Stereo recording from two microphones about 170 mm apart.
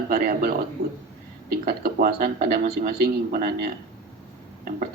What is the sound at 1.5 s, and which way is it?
A man's voice, 65° right (ahead or behind).